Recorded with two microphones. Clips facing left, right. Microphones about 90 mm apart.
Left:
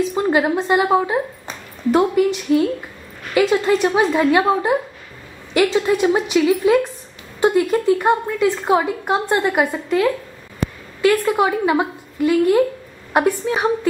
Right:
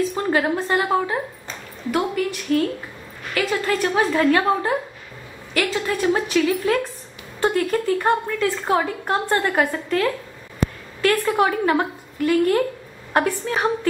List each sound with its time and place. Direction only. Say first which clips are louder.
0.1 s a woman's voice: left 3 dB; 15° left (ahead or behind)